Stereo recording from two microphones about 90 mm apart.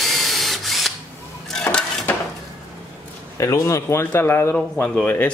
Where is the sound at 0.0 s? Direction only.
Centre (ahead or behind).